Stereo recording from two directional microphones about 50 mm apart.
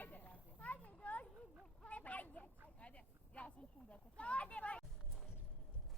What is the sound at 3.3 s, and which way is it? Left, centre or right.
Speech, left.